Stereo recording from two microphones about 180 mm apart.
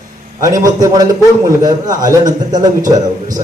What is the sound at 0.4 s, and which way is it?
A man's voice, 20° right (ahead or behind).